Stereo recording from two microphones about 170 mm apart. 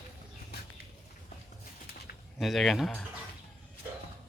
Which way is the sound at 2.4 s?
Centre (ahead or behind).